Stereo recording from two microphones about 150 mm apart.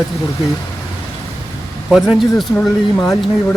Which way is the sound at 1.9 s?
Centre (ahead or behind).